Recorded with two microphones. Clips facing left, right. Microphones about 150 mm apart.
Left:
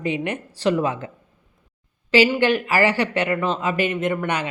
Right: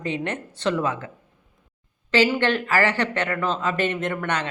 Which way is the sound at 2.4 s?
10° left (ahead or behind).